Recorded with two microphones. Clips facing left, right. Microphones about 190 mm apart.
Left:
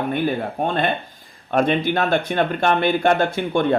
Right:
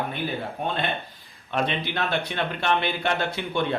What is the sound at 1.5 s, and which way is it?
A man's voice, 50° left (ahead or behind).